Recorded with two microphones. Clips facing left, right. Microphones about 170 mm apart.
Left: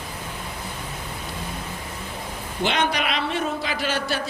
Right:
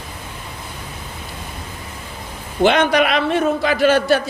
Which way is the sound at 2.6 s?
55° right (ahead or behind).